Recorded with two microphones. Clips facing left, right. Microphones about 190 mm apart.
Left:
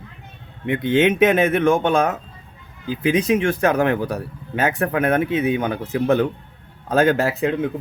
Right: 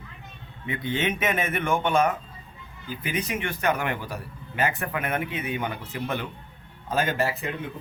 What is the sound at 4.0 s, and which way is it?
A man's voice, 70° left (ahead or behind).